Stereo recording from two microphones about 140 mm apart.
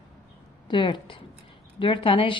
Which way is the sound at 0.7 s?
35° left (ahead or behind).